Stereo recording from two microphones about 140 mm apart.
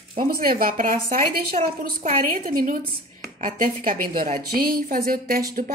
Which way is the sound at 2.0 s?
70° right (ahead or behind).